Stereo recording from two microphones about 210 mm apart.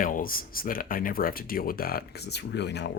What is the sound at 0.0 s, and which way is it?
Speech, 40° left (ahead or behind).